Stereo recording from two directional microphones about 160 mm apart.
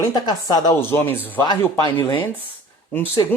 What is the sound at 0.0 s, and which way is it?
Speech, 25° left (ahead or behind).